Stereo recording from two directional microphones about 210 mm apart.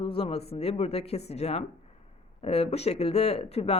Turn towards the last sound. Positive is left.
turn(degrees=30)  # may be behind; listen again after turning